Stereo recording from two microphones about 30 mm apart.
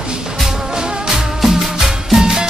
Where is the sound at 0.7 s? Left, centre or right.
Centre.